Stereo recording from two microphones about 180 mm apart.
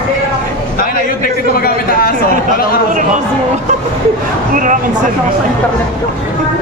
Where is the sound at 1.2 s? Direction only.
55° left (ahead or behind).